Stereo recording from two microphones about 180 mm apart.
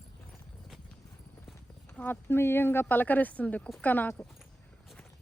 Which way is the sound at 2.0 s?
10° left (ahead or behind).